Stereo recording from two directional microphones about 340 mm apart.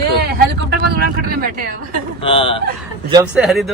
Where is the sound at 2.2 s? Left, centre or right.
Centre.